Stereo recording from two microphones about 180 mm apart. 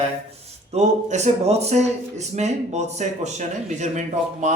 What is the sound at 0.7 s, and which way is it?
Speech, 40° right (ahead or behind).